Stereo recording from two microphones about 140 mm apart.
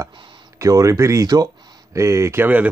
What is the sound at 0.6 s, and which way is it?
Speech, 25° right (ahead or behind).